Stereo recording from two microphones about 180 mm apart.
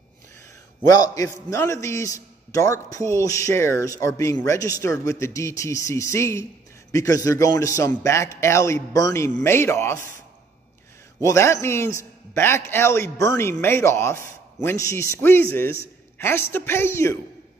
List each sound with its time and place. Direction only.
0.9 s a man's voice: 20° left (ahead or behind)
11.2 s a man's voice: 15° left (ahead or behind)